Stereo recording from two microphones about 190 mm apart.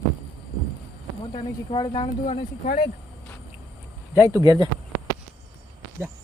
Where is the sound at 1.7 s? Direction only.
25° left (ahead or behind).